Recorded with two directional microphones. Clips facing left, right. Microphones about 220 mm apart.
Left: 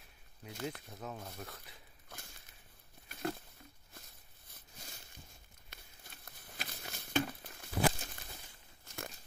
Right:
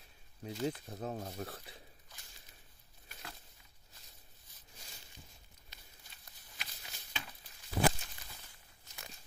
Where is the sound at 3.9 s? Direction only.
55° left (ahead or behind).